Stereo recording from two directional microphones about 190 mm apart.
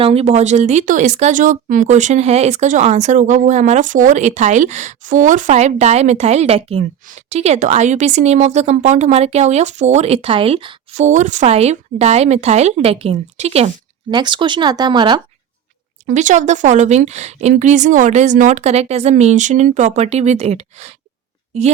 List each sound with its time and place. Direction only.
0.0 s speech: 30° right (ahead or behind)
14.1 s speech: 25° right (ahead or behind)
16.0 s speech: 40° right (ahead or behind)